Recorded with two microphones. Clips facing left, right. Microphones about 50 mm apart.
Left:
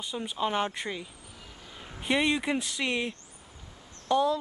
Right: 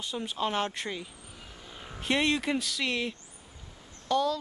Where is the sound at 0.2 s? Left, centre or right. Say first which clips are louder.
Left 1 dB; centre.